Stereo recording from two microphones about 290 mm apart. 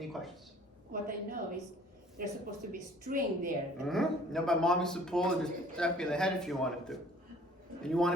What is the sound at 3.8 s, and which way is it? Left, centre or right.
Speech, centre.